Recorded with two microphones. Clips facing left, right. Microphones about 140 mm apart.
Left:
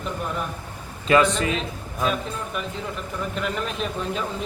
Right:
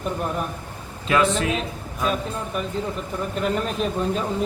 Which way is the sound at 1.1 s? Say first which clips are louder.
Left 1 dB; centre (ahead or behind).